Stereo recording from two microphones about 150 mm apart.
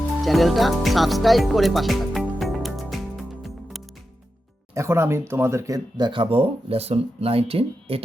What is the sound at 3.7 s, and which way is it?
Music, centre (ahead or behind).